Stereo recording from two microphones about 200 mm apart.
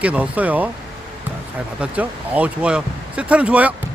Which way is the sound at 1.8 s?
5° right (ahead or behind).